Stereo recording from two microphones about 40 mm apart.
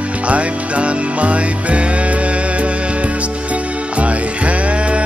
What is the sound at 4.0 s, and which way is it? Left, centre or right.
Music, right.